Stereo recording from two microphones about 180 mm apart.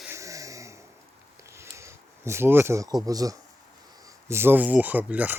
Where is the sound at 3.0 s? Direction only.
20° right (ahead or behind).